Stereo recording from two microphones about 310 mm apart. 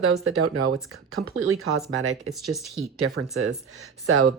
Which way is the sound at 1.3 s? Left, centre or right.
Right.